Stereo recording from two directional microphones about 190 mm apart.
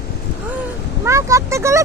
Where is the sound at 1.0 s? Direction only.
15° right (ahead or behind).